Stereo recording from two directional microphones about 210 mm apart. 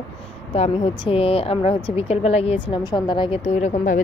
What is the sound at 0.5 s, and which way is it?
A woman's voice, 25° left (ahead or behind).